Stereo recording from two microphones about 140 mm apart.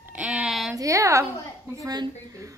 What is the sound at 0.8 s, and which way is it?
A woman's voice, 20° right (ahead or behind).